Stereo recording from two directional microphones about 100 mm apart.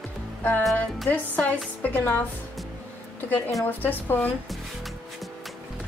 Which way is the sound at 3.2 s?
15° left (ahead or behind).